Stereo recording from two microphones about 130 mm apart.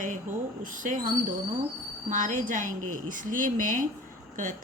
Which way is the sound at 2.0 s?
80° right.